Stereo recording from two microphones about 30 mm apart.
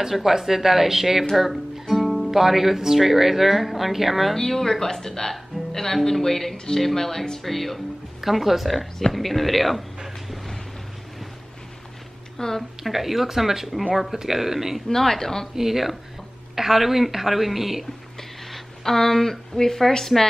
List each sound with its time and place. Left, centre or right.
0.1 s a woman's voice: centre
4.4 s speech: centre
6.5 s speech: left
6.8 s speech: centre
8.2 s speech: centre
12.4 s speech: centre
12.8 s a woman's voice: centre
14.9 s speech: centre
15.5 s a woman's voice: centre
18.5 s a woman's voice: centre